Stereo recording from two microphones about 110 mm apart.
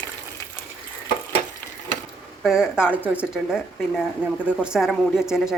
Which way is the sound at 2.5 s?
5° right (ahead or behind).